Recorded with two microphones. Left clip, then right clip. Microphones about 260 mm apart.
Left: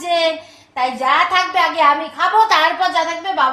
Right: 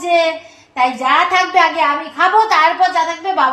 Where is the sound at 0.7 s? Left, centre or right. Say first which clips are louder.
Right 2 dB; left.